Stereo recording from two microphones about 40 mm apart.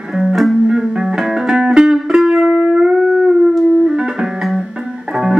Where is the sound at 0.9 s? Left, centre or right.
Centre.